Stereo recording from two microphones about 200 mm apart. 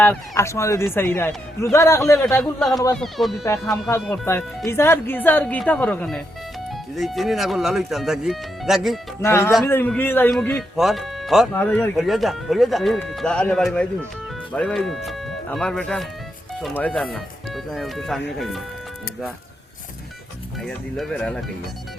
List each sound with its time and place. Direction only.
0.0 s speech: 10° left (ahead or behind)
2.4 s speech: centre (ahead or behind)
2.7 s speech: 15° left (ahead or behind)
3.0 s speech: centre (ahead or behind)
4.7 s speech: 10° left (ahead or behind)
9.2 s speech: 15° left (ahead or behind)
20.6 s speech: centre (ahead or behind)